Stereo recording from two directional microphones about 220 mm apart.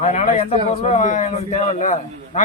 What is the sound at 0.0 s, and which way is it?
A man's voice, 30° left (ahead or behind).